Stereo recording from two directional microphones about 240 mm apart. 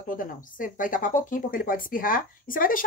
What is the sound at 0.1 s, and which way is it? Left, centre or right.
Speech, left.